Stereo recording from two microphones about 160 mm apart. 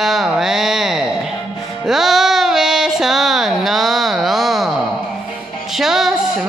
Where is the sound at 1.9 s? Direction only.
Centre (ahead or behind).